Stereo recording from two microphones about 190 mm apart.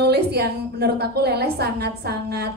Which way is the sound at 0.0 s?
60° right (ahead or behind).